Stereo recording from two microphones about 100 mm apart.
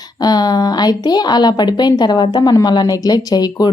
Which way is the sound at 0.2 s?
40° left (ahead or behind).